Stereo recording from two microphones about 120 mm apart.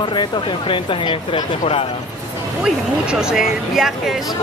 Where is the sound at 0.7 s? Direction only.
45° left (ahead or behind).